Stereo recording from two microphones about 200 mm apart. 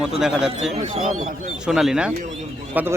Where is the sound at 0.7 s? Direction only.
35° right (ahead or behind).